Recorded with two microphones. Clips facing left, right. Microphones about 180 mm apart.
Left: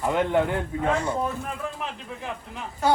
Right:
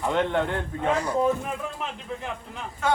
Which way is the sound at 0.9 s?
25° left (ahead or behind).